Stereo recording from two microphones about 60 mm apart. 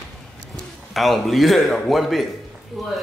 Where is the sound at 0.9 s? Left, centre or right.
Centre.